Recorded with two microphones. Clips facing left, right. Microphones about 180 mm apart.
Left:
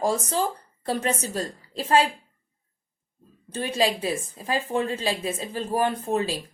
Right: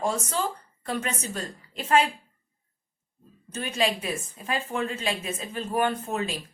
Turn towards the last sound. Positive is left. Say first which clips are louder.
# left 3 dB
turn(degrees=35)  # may be behind; listen again after turning